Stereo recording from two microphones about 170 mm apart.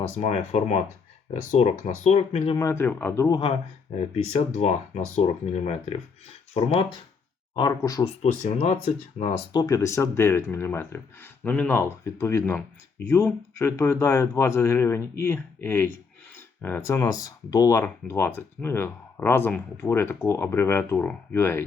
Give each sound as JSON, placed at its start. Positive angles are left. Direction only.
{"t": 0.2, "sound": "speech", "side_deg": 40}
{"t": 2.6, "sound": "speech", "side_deg": 15}
{"t": 3.9, "sound": "speech", "side_deg": 40}
{"t": 7.8, "sound": "speech", "side_deg": 20}
{"t": 8.2, "sound": "speech", "side_deg": 40}
{"t": 9.5, "sound": "speech", "side_deg": 20}